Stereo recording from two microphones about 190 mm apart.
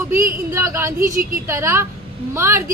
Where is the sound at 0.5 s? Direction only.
15° right (ahead or behind).